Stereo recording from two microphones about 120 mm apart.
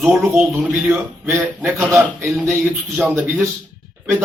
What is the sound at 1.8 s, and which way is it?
A man's voice, 5° right (ahead or behind).